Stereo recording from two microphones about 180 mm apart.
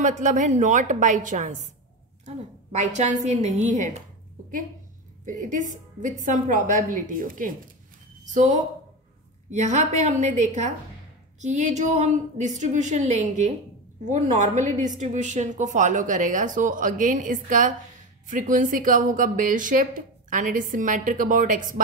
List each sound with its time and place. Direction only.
0.0 s a woman's voice: 45° right (ahead or behind)
5.2 s a woman's voice: 45° right (ahead or behind)